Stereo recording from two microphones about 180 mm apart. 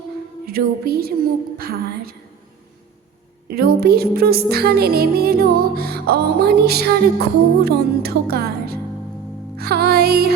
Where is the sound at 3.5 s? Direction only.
55° right (ahead or behind).